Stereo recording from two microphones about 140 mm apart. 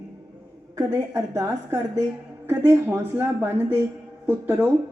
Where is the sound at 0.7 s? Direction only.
20° right (ahead or behind).